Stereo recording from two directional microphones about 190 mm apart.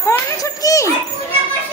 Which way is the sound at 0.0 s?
15° left (ahead or behind).